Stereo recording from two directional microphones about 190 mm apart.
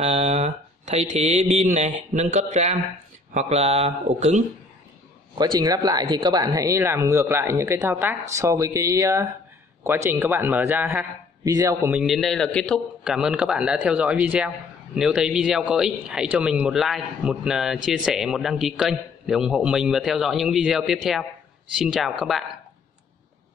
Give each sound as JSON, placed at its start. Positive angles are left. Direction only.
{"t": 0.0, "sound": "speech", "side_deg": -30}
{"t": 5.4, "sound": "speech", "side_deg": -20}
{"t": 11.9, "sound": "a man's voice", "side_deg": 0}